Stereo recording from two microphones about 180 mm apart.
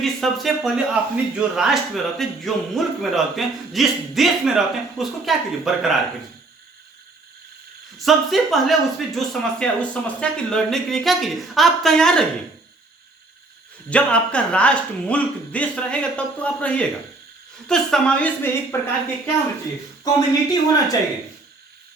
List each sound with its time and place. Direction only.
0.0 s speech: centre (ahead or behind)
7.9 s speech: centre (ahead or behind)
13.9 s speech: 5° left (ahead or behind)
20.1 s speech: 20° left (ahead or behind)